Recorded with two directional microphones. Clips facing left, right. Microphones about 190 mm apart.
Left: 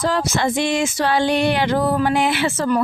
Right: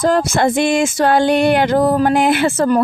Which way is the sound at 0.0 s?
50° right (ahead or behind).